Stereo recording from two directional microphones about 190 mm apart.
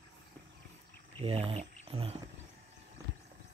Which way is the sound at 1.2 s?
30° right (ahead or behind).